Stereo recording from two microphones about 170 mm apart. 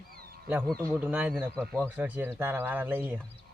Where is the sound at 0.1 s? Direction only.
60° right (ahead or behind).